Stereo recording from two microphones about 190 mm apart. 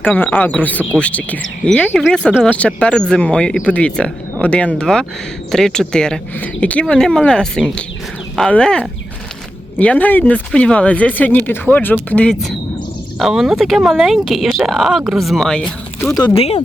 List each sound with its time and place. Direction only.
0.0 s speech: 10° left (ahead or behind)
16.1 s speech: 25° left (ahead or behind)